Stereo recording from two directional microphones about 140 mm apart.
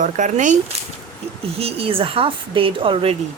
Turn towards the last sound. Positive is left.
turn(degrees=-40)  # may be behind; listen again after turning